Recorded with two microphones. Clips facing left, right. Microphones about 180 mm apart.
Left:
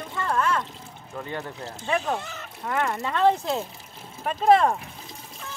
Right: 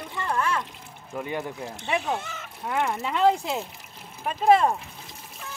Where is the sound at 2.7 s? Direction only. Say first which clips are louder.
Even; 15° right (ahead or behind).